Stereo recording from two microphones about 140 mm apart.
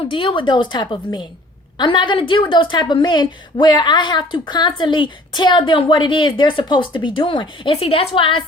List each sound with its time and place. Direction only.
0.1 s a woman's voice: 40° left (ahead or behind)